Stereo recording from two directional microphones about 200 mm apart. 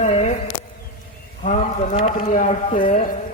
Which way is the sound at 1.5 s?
35° left (ahead or behind).